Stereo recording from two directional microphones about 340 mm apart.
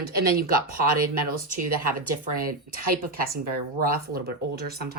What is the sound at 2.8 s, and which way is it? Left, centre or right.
Speech, right.